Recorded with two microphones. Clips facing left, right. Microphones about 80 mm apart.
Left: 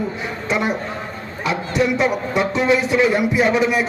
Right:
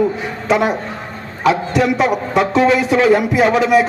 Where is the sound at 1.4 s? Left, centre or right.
Right.